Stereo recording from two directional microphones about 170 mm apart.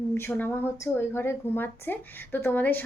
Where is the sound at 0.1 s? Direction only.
10° left (ahead or behind).